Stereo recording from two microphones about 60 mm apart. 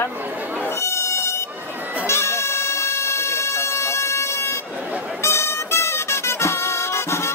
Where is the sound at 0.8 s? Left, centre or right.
Left.